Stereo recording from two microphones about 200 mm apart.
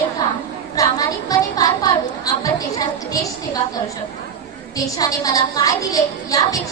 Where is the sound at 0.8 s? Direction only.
20° left (ahead or behind).